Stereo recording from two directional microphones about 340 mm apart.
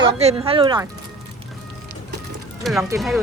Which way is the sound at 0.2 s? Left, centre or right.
Centre.